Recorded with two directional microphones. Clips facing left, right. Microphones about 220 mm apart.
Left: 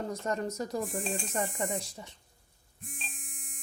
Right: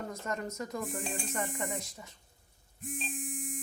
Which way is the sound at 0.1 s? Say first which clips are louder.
Left 4 dB; 35° left (ahead or behind).